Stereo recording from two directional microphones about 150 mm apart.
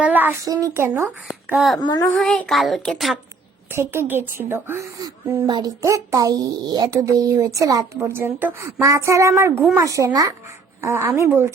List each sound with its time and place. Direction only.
0.0 s speech: 10° right (ahead or behind)
0.4 s speech: 25° right (ahead or behind)
1.5 s speech: centre (ahead or behind)
1.8 s child singing: 30° left (ahead or behind)
2.0 s speech: 5° left (ahead or behind)
3.7 s speech: 15° right (ahead or behind)